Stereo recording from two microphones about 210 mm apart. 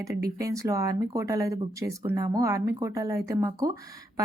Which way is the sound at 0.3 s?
15° right (ahead or behind).